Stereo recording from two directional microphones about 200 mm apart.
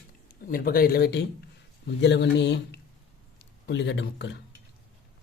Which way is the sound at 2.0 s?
60° left (ahead or behind).